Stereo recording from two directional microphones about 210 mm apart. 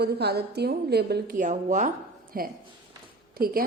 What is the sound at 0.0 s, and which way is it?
A woman's voice, 50° right (ahead or behind).